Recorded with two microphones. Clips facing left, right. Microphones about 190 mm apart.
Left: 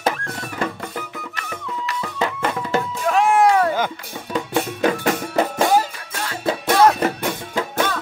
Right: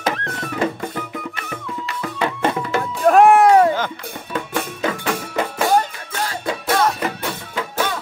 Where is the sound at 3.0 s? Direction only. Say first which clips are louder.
Right 6 dB; 55° right (ahead or behind).